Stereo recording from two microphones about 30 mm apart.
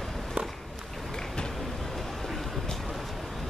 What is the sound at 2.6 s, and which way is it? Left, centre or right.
Vehicle, centre.